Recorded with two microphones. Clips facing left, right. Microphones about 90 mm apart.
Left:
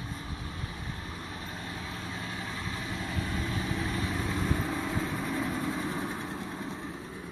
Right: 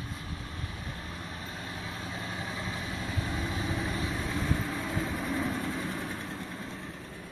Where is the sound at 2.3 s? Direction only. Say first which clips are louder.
Right 1 dB; 15° right (ahead or behind).